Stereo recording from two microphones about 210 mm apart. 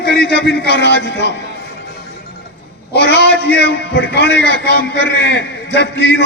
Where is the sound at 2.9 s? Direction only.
55° left (ahead or behind).